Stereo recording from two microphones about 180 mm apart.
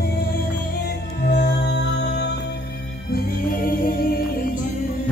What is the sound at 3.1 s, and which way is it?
Music, 55° left (ahead or behind).